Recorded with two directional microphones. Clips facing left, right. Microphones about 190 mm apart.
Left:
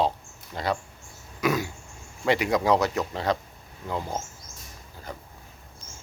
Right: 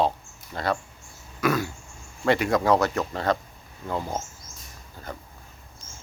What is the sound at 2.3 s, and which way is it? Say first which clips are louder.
Speech: right 1 dB; 15° left (ahead or behind).